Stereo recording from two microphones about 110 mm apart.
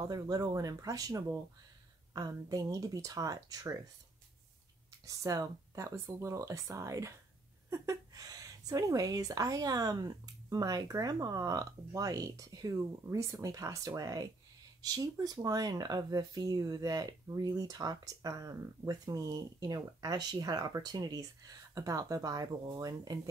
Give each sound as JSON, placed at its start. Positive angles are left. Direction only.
{"t": 0.0, "sound": "speech", "side_deg": -35}
{"t": 5.0, "sound": "speech", "side_deg": -35}